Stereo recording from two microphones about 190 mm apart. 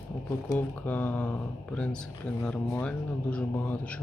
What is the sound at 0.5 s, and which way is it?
Speech, 10° left (ahead or behind).